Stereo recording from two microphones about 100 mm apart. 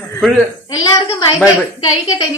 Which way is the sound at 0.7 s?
45° left (ahead or behind).